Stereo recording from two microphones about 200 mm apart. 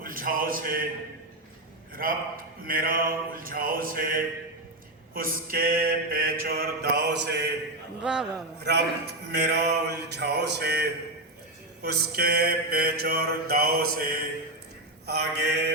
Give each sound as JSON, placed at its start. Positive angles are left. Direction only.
{"t": 0.0, "sound": "a man's voice", "side_deg": -45}
{"t": 2.0, "sound": "mantra", "side_deg": -45}
{"t": 8.0, "sound": "a man's voice", "side_deg": -5}
{"t": 8.6, "sound": "a man's voice", "side_deg": -55}
{"t": 11.8, "sound": "mantra", "side_deg": -55}
{"t": 15.0, "sound": "a man's voice", "side_deg": -55}